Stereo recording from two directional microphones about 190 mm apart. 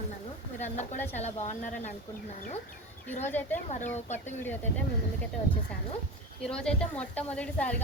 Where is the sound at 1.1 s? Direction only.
35° left (ahead or behind).